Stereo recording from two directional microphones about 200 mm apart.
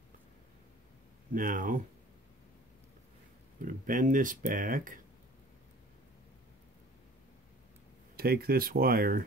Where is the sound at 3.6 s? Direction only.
45° right (ahead or behind).